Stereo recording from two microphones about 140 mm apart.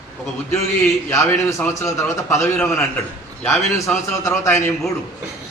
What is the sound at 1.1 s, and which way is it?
A man's voice, 20° left (ahead or behind).